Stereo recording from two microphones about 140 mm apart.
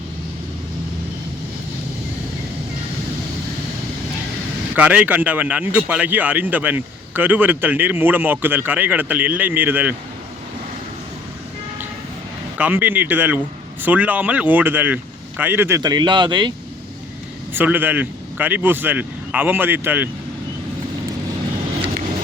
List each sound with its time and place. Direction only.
4.7 s a man's voice: 10° right (ahead or behind)
12.5 s a man's voice: 15° right (ahead or behind)
15.8 s speech: 30° right (ahead or behind)
17.5 s a man's voice: 15° right (ahead or behind)